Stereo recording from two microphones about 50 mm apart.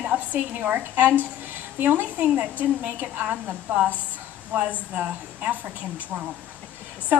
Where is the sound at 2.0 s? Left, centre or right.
Right.